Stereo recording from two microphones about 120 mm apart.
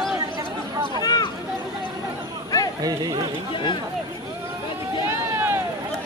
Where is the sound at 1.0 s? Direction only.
35° left (ahead or behind).